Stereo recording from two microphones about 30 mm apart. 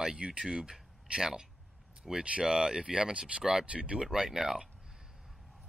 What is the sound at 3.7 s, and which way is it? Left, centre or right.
Speech, right.